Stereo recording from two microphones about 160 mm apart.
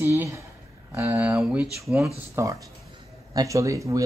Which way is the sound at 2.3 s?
20° right (ahead or behind).